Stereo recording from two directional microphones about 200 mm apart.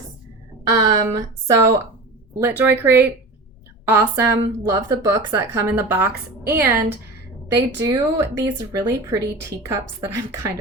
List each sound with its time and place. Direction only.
0.7 s speech: 20° right (ahead or behind)